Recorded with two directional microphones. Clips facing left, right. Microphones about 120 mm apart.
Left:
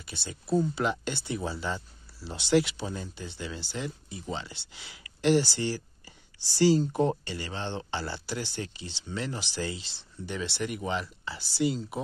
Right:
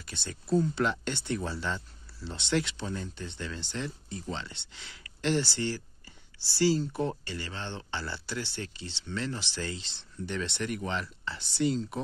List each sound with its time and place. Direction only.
0.0 s speech: 5° left (ahead or behind)